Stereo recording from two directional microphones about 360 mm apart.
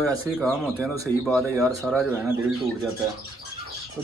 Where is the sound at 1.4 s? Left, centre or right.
Centre.